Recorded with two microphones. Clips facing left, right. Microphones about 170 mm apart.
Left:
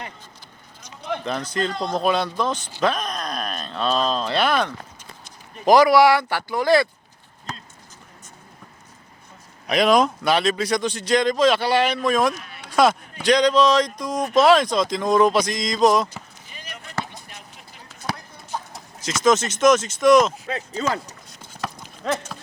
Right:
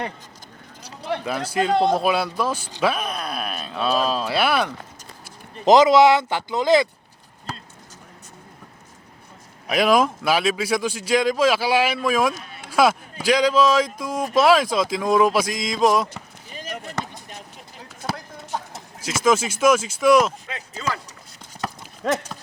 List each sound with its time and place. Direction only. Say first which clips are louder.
0.8 s a sound: right 2 dB; 35° right (ahead or behind)
1.1 s speech: right 2 dB; 5° right (ahead or behind)
5.6 s speech: right 1 dB; 20° right (ahead or behind)
9.6 s speech: left 1 dB; 5° right (ahead or behind)
12.3 s a sound: even; 30° right (ahead or behind)
12.6 s a sound: even; 5° right (ahead or behind)
13.2 s speech: left 1 dB; 5° right (ahead or behind)
16.6 s chop: right 8 dB; 45° right (ahead or behind)
19.0 s speech: left 1 dB; 5° right (ahead or behind)
20.5 s speech: left 7 dB; 35° left (ahead or behind)